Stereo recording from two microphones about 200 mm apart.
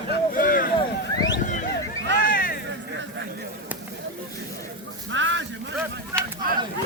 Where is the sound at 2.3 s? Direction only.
45° left (ahead or behind).